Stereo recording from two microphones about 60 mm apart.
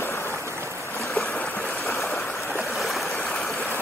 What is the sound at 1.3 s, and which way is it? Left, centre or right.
Stream, left.